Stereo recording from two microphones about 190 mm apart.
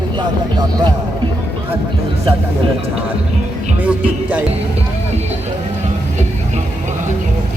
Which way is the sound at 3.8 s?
5° right (ahead or behind).